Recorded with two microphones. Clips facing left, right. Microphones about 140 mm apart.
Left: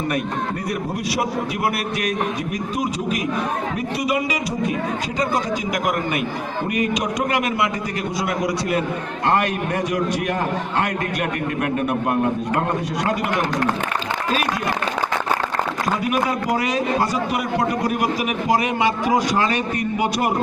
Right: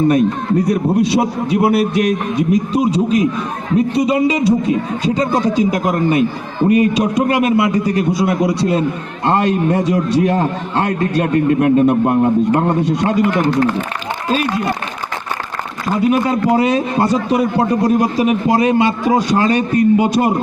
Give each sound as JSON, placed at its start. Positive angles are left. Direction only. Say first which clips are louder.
{"t": 0.7, "sound": "a man's voice", "louder": "right 10 dB", "side_deg": -30}
{"t": 14.3, "sound": "a man's voice", "louder": "right 6 dB", "side_deg": -30}
{"t": 16.0, "sound": "a man's voice", "louder": "right 10 dB", "side_deg": -30}